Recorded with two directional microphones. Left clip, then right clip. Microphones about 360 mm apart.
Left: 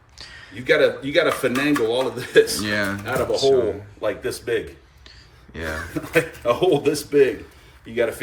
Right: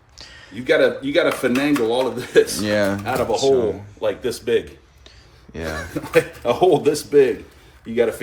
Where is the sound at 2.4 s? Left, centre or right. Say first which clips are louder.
Right 3 dB; centre.